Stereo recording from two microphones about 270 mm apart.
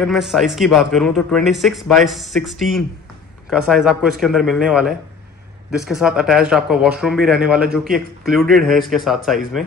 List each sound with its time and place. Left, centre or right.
0.0 s speech: centre